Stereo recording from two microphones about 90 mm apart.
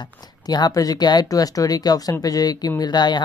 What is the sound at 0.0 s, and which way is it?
Speech, 50° left (ahead or behind).